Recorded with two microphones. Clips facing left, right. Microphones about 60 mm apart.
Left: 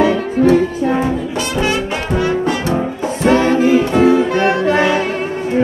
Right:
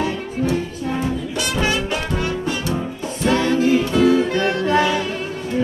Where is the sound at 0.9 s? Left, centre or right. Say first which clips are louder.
Left 6 dB; left.